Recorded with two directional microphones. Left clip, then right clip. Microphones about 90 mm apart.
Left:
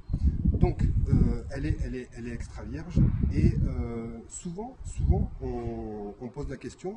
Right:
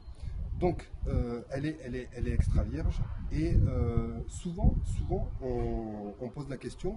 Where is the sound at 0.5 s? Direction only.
20° right (ahead or behind).